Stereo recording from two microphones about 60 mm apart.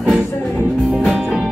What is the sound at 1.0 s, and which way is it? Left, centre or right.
Music, centre.